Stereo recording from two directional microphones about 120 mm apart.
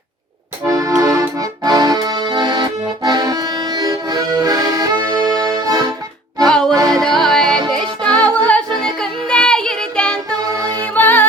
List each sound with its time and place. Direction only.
0.7 s accordion: 25° right (ahead or behind)
1.4 s accordion: 35° right (ahead or behind)
5.5 s music: 30° right (ahead or behind)
6.5 s music: 5° left (ahead or behind)
6.7 s music: 30° right (ahead or behind)
7.0 s music: 5° left (ahead or behind)
10.4 s music: 30° right (ahead or behind)
10.9 s music: 15° left (ahead or behind)